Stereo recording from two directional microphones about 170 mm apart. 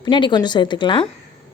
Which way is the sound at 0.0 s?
25° left (ahead or behind).